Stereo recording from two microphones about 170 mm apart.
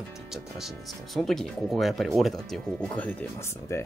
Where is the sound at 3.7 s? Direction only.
15° left (ahead or behind).